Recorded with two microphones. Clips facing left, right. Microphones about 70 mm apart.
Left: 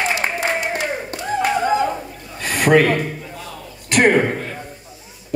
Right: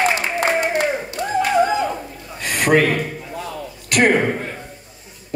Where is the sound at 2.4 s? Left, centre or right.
Left.